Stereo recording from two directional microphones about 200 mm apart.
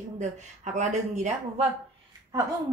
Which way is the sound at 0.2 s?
35° right (ahead or behind).